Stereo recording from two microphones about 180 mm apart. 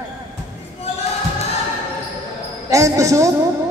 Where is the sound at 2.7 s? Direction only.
20° right (ahead or behind).